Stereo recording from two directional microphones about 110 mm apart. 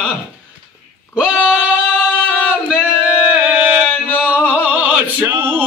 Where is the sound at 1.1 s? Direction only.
10° right (ahead or behind).